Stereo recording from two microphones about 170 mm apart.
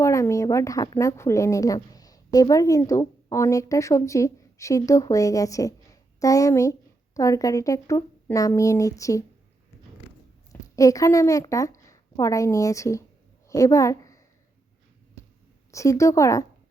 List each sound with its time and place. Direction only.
0.0 s speech: 15° left (ahead or behind)
10.5 s a woman's voice: 20° left (ahead or behind)
15.7 s speech: 20° left (ahead or behind)